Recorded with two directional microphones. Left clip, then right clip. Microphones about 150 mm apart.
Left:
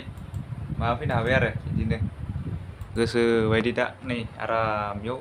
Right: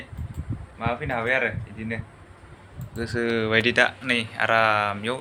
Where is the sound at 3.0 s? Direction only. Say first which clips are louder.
Left 3 dB; 60° left (ahead or behind).